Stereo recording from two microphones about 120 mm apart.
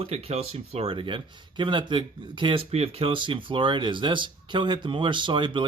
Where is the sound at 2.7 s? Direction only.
55° right (ahead or behind).